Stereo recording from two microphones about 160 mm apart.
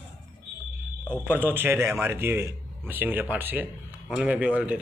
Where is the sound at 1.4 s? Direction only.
15° right (ahead or behind).